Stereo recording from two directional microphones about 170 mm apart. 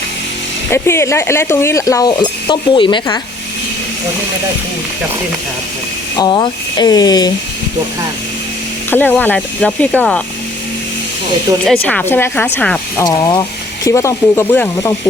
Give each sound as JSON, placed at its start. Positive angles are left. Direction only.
{"t": 0.7, "sound": "speech", "side_deg": 15}
{"t": 6.1, "sound": "speech", "side_deg": 25}
{"t": 8.9, "sound": "speech", "side_deg": 10}
{"t": 11.6, "sound": "speech", "side_deg": 5}
{"t": 13.1, "sound": "speech", "side_deg": 25}